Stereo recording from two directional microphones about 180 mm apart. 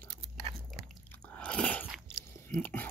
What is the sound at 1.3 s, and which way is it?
Biting, 5° left (ahead or behind).